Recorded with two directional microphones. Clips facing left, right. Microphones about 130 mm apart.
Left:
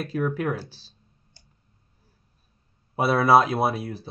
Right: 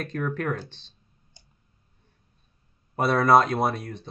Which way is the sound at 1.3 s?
15° right (ahead or behind).